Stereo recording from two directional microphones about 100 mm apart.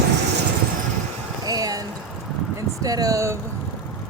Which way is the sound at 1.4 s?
40° right (ahead or behind).